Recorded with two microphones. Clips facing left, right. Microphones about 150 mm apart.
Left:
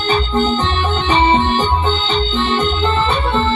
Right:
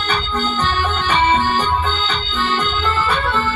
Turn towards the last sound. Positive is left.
turn(degrees=25)  # may be behind; listen again after turning